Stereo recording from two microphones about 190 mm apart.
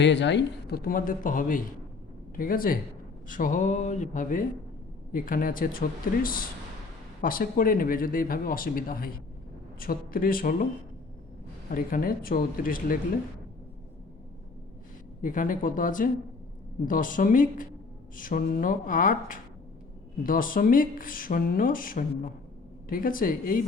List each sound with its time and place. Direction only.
0.0 s speech: 70° left (ahead or behind); by 10.7 s 50° left (ahead or behind)
11.7 s speech: 45° left (ahead or behind)
15.2 s speech: 45° left (ahead or behind)